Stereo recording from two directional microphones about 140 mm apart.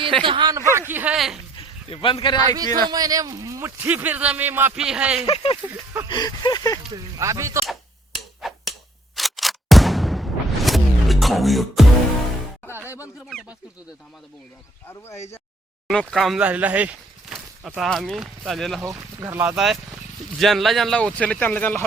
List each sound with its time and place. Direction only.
0.0 s a man's voice: 40° right (ahead or behind); by 1.1 s 15° right (ahead or behind)
1.1 s speech: centre (ahead or behind)
1.5 s a sound: 40° left (ahead or behind)
2.8 s a man's voice: 25° right (ahead or behind)
3.8 s a man's voice: 10° right (ahead or behind)
5.2 s speech: 40° left (ahead or behind)
5.6 s a man's voice: 15° right (ahead or behind)
6.1 s a sound: 30° left (ahead or behind)
6.9 s a man's voice: 20° right (ahead or behind)
8.4 s finger snapping: centre (ahead or behind)
9.1 s a sound: centre (ahead or behind)
15.9 s speech: 5° left (ahead or behind)
18.9 s a man's voice: 20° right (ahead or behind)
19.5 s speech: 5° right (ahead or behind)